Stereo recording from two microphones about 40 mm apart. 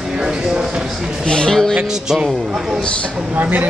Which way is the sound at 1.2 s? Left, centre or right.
Left.